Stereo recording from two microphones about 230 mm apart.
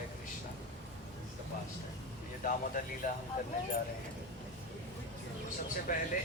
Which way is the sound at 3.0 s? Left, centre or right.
Left.